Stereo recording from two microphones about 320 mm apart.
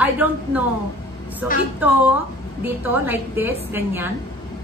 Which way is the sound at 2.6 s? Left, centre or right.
Centre.